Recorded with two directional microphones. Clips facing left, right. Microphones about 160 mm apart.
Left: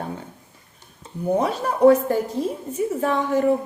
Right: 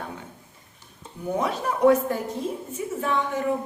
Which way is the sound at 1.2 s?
35° left (ahead or behind).